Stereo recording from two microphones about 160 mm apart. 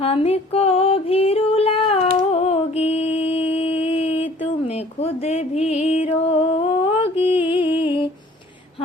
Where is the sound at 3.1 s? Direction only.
35° left (ahead or behind).